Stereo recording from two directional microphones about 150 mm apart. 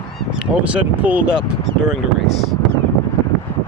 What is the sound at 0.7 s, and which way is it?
Speech, 10° right (ahead or behind).